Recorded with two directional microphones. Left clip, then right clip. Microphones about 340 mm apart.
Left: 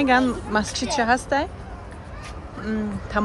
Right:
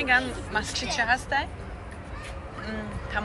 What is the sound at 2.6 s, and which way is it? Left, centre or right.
Speech, centre.